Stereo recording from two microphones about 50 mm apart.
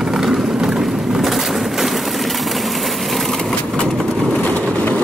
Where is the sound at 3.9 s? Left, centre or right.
Centre.